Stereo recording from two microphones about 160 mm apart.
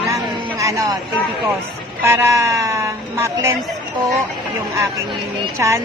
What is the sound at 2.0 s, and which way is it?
A woman's voice, 15° right (ahead or behind).